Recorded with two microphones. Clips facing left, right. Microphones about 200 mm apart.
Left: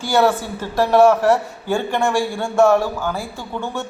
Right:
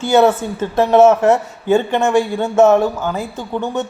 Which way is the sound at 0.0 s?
25° right (ahead or behind).